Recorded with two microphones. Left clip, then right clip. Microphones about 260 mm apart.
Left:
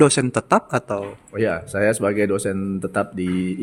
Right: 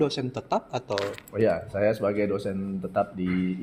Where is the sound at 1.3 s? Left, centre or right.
Left.